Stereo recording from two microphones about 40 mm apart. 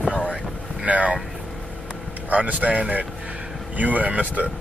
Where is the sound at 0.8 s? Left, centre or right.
Right.